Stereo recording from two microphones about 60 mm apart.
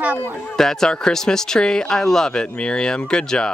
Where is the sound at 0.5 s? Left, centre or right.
Centre.